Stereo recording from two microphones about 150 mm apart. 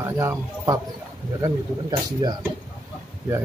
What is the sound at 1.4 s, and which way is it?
Speech, 25° right (ahead or behind).